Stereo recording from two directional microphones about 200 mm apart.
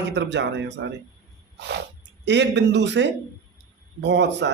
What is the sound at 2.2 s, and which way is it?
A woman's voice, 60° right (ahead or behind).